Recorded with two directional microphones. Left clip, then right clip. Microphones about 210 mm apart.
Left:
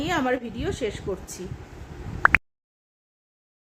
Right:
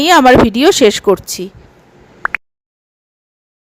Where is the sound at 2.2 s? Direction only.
Centre (ahead or behind).